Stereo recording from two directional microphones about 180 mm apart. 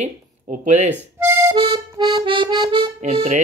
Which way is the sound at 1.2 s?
15° right (ahead or behind).